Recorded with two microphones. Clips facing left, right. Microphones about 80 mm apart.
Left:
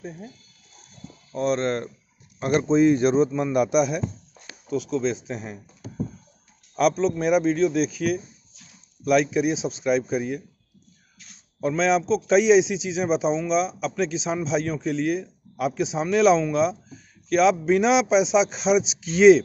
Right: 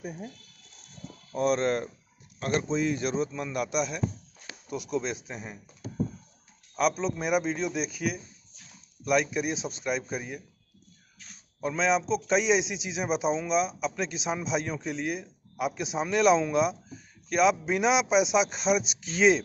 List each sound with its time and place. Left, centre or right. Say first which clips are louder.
1.3 s a man's voice: left 2 dB; centre
2.4 s a man's voice: left 9 dB; left
4.6 s a man's voice: left 6 dB; centre
6.7 s a man's voice: left 6 dB; centre
11.6 s a man's voice: left 5 dB; centre